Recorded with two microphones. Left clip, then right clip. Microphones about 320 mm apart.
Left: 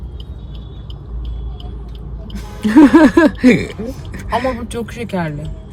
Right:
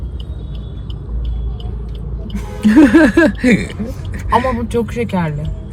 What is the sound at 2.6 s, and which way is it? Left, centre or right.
Speech, left.